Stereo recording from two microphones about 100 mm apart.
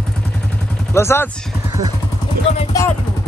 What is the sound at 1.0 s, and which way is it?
Speech, 25° left (ahead or behind).